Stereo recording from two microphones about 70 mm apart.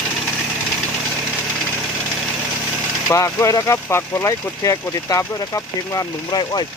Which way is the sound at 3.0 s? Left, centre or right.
Left.